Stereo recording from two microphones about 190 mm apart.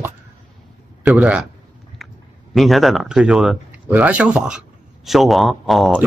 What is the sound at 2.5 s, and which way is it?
Speech, centre (ahead or behind).